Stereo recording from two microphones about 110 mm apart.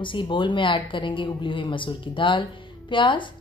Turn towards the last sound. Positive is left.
turn(degrees=45)  # may be behind; listen again after turning